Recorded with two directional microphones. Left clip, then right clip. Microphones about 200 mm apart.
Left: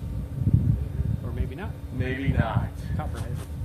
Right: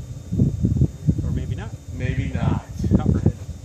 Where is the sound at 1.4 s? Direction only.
50° right (ahead or behind).